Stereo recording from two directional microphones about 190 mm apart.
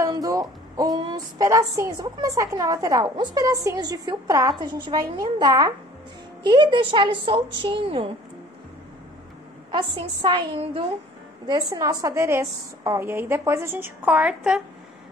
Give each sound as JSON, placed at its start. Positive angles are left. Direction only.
{"t": 0.0, "sound": "a woman's voice", "side_deg": -15}
{"t": 9.7, "sound": "a woman's voice", "side_deg": -25}